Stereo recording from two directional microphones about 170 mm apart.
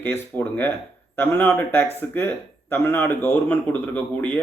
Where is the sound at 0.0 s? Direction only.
10° left (ahead or behind).